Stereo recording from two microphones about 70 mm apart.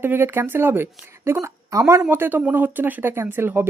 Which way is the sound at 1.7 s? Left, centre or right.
Right.